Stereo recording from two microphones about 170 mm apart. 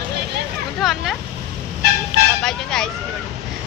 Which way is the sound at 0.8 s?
Centre (ahead or behind).